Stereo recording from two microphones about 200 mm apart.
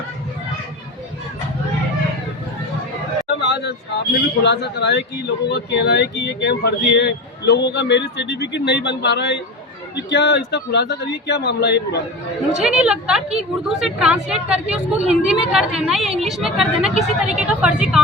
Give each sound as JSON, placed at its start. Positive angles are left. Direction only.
{"t": 3.2, "sound": "vehicle", "side_deg": 60}
{"t": 4.4, "sound": "speech", "side_deg": 60}
{"t": 12.5, "sound": "a woman's voice", "side_deg": -5}